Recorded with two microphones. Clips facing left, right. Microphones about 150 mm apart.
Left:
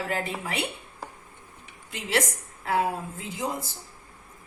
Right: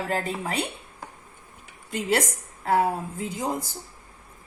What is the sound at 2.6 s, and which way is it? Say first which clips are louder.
Speech: right 3 dB; 45° right (ahead or behind).